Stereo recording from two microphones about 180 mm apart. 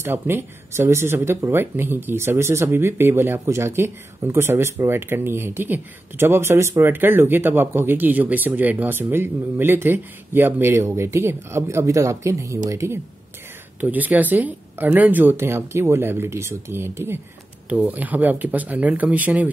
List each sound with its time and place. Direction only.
0.0 s speech: 15° right (ahead or behind)